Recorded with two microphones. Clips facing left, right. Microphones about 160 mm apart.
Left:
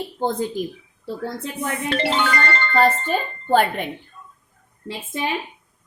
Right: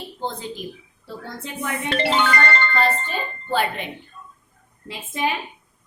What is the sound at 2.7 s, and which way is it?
A woman's voice, 45° left (ahead or behind).